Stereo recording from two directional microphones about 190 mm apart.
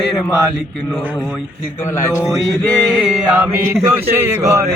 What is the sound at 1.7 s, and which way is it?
Mantra, 15° left (ahead or behind).